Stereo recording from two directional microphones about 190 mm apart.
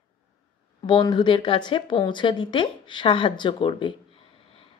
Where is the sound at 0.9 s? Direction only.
20° left (ahead or behind).